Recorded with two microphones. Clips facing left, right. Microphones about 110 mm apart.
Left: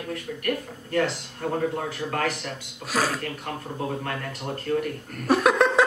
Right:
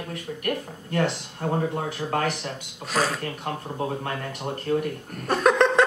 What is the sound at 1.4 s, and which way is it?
Speech, 30° right (ahead or behind).